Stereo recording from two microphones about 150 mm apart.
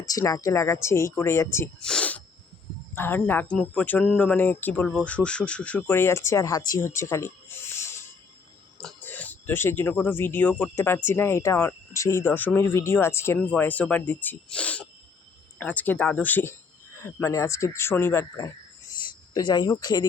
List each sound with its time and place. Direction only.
0.0 s speech: 25° left (ahead or behind)
1.8 s a sound: 5° left (ahead or behind)
2.9 s speech: 15° left (ahead or behind)
8.8 s speech: 5° left (ahead or behind); by 20.1 s 25° left (ahead or behind)